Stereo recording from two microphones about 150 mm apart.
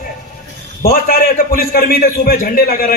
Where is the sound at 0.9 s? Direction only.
70° left (ahead or behind).